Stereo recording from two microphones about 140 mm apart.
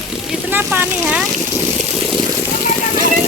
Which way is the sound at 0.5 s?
15° right (ahead or behind).